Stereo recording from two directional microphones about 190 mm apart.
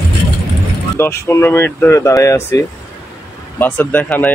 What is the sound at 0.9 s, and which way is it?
Speech, 15° left (ahead or behind).